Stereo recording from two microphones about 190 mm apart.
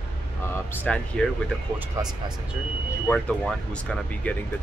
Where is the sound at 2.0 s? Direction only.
20° right (ahead or behind).